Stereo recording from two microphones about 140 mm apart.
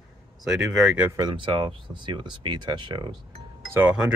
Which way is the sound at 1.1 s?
30° right (ahead or behind).